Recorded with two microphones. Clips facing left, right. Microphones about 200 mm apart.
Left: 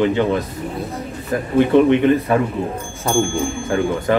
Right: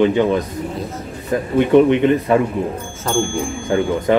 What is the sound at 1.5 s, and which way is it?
Speech, 20° right (ahead or behind).